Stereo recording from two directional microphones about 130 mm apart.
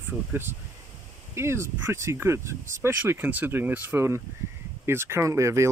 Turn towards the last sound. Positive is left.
turn(degrees=-20)  # may be behind; listen again after turning